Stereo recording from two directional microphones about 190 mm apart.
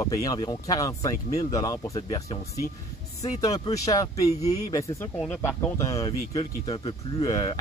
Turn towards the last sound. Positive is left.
turn(degrees=20)  # may be behind; listen again after turning